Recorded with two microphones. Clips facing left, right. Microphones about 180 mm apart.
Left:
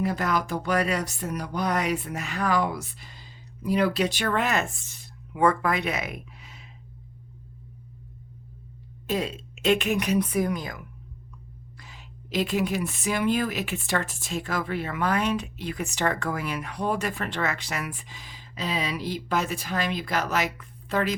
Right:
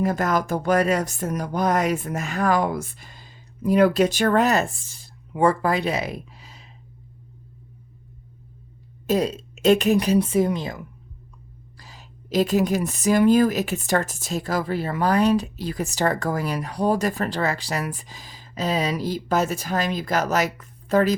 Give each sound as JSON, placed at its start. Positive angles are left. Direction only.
{"t": 0.0, "sound": "speech", "side_deg": -45}
{"t": 9.0, "sound": "a woman's voice", "side_deg": -40}
{"t": 11.8, "sound": "a woman's voice", "side_deg": -40}